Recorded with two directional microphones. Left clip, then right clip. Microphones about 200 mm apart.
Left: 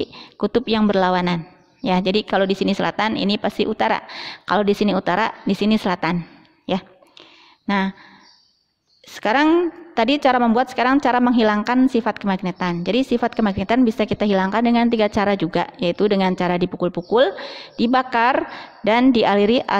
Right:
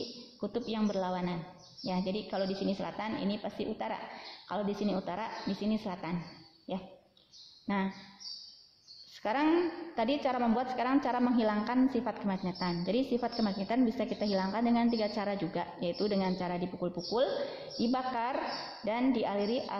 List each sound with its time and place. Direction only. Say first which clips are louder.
0.4 s a woman's voice: left 16 dB; 45° left (ahead or behind)
7.6 s speech: left 13 dB; 40° left (ahead or behind)
9.1 s a woman's voice: left 13 dB; 40° left (ahead or behind)